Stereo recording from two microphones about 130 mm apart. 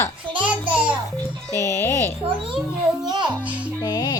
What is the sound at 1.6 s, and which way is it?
Speech, 25° left (ahead or behind).